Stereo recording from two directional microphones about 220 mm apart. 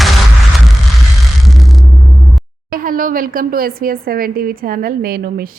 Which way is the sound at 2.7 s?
40° right (ahead or behind).